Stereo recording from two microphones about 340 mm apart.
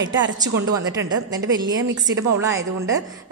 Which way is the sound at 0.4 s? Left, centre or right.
Centre.